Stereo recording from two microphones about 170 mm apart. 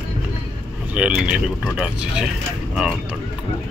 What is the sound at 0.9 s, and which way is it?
Speech, 5° right (ahead or behind).